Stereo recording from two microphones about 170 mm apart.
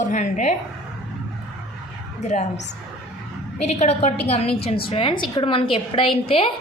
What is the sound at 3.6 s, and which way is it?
A woman's voice, 40° left (ahead or behind).